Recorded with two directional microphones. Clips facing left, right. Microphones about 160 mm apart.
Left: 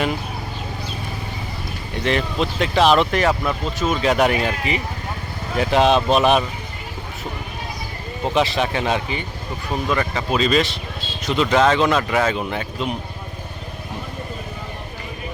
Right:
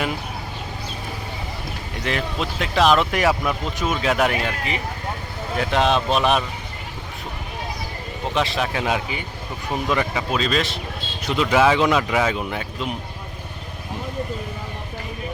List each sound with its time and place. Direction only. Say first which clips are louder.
2.0 s speech: left 4 dB; centre (ahead or behind)
8.3 s speech: left 3 dB; centre (ahead or behind); by 10.2 s 15° right (ahead or behind)
10.3 s speech: left 5 dB; centre (ahead or behind)